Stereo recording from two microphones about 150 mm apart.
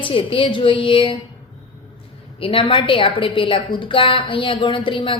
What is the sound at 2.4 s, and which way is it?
A woman's voice, 35° left (ahead or behind).